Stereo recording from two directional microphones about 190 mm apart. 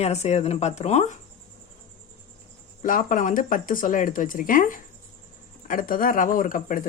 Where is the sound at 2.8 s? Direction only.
45° left (ahead or behind).